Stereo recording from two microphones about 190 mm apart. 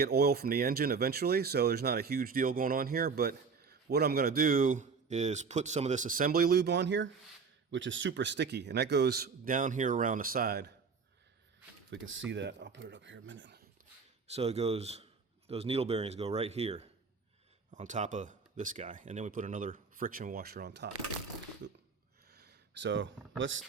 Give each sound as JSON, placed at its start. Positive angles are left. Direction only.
{"t": 0.0, "sound": "a man's voice", "side_deg": -55}
{"t": 11.9, "sound": "speech", "side_deg": -90}
{"t": 12.3, "sound": "speech", "side_deg": -70}
{"t": 14.3, "sound": "speech", "side_deg": -35}
{"t": 21.6, "sound": "a sound", "side_deg": -70}
{"t": 22.3, "sound": "a sound", "side_deg": -60}
{"t": 23.4, "sound": "speech", "side_deg": -85}